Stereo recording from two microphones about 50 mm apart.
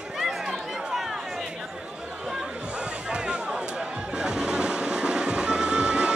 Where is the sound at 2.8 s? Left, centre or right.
Centre.